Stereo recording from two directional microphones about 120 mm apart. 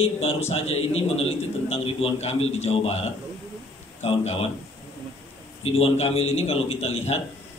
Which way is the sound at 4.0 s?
60° left (ahead or behind).